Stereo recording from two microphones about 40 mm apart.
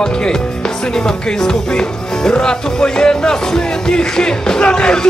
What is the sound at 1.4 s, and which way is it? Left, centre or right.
Music, centre.